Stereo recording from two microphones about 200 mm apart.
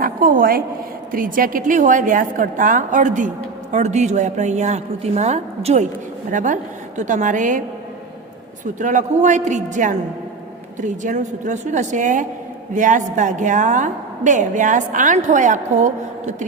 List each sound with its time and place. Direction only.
0.0 s a woman's voice: 45° right (ahead or behind)
8.6 s a woman's voice: 40° right (ahead or behind)